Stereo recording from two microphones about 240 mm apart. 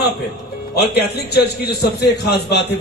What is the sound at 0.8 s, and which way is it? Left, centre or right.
A man's voice, left.